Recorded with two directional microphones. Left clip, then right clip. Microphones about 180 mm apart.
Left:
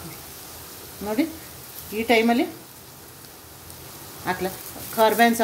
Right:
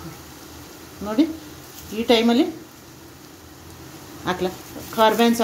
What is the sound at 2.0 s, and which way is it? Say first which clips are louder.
Speech: right 2 dB; centre (ahead or behind).